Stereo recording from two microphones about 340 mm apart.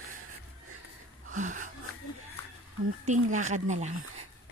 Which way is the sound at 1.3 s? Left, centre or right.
Right.